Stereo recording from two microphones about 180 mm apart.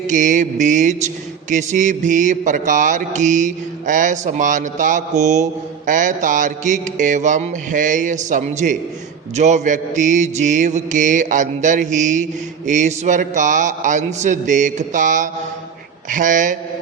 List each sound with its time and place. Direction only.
0.1 s mantra: 45° right (ahead or behind)